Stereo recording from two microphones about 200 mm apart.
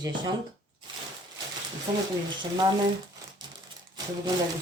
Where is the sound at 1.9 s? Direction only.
25° right (ahead or behind).